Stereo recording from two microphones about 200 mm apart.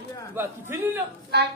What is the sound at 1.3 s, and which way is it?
Speech, 55° right (ahead or behind).